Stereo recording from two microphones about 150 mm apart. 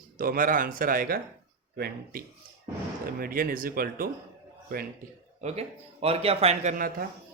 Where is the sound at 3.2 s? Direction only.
75° right (ahead or behind).